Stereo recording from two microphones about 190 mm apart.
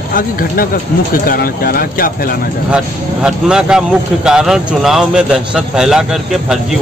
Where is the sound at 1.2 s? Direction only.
50° left (ahead or behind).